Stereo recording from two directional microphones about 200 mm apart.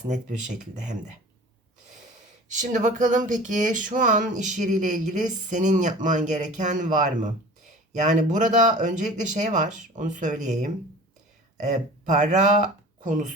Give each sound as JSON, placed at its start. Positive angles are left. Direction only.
{"t": 0.1, "sound": "speech", "side_deg": -40}
{"t": 2.5, "sound": "speech", "side_deg": -35}